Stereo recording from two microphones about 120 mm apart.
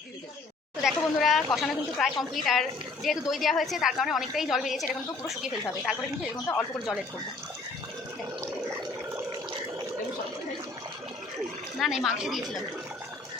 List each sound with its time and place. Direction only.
0.8 s a woman's voice: centre (ahead or behind)
6.5 s a woman's voice: 5° right (ahead or behind)
11.8 s a woman's voice: 5° right (ahead or behind)